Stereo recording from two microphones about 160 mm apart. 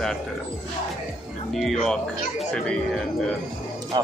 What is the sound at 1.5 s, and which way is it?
Speech, centre (ahead or behind).